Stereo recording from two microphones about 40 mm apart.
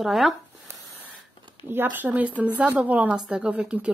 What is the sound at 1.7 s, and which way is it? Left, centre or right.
Speech, right.